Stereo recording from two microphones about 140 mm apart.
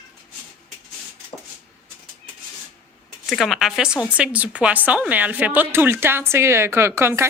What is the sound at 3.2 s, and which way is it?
A woman's voice, centre (ahead or behind).